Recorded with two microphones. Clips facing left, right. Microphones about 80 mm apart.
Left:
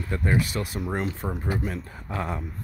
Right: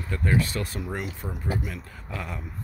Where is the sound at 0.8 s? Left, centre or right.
Left.